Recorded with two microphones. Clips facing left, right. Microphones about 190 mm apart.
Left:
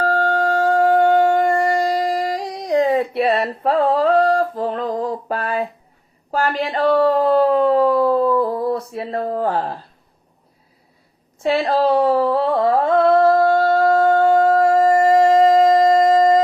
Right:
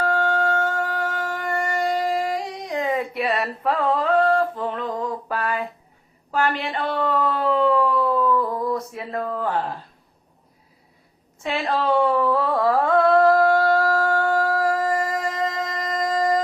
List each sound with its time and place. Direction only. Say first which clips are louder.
0.0 s shofar: left 3 dB; 35° left (ahead or behind)
6.3 s a sound: left 3 dB; 35° left (ahead or behind)
11.4 s humming: left 6 dB; 35° left (ahead or behind)